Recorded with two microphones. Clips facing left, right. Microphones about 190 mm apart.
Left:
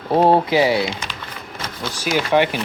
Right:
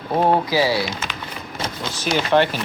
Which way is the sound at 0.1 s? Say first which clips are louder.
Left 3 dB; 30° left (ahead or behind).